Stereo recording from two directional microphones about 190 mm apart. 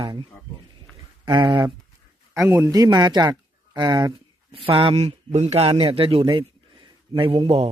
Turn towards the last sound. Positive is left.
turn(degrees=-30)  # may be behind; listen again after turning